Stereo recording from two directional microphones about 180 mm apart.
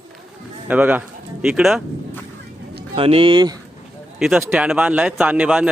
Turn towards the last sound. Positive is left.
turn(degrees=-5)  # may be behind; listen again after turning